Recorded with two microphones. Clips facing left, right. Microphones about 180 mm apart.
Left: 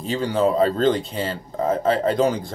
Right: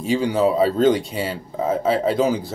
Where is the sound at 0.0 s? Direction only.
10° right (ahead or behind).